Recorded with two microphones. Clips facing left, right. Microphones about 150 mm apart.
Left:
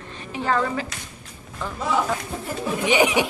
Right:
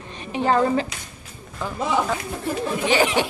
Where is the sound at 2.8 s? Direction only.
15° left (ahead or behind).